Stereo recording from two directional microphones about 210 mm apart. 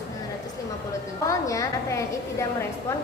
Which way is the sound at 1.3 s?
15° left (ahead or behind).